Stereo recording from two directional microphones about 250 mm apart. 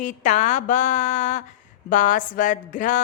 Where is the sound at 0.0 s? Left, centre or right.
Left.